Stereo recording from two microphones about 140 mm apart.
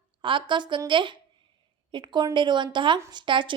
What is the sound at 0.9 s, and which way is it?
A woman's voice, 35° right (ahead or behind).